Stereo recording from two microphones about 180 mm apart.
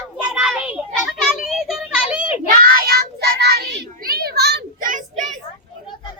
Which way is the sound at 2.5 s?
55° right (ahead or behind).